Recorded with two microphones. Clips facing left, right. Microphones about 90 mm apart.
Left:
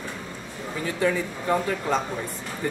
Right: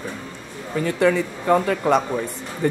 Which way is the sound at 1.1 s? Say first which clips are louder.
Right 6 dB; 70° right (ahead or behind).